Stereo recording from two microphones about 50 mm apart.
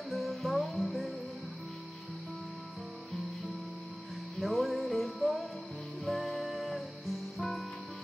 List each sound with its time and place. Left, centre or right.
0.1 s music: centre
4.4 s music: centre